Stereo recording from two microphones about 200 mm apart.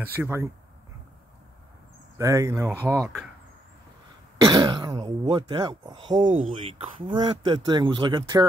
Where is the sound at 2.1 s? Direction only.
15° right (ahead or behind).